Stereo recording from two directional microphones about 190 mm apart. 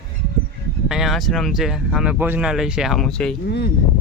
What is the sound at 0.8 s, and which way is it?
Speech, centre (ahead or behind).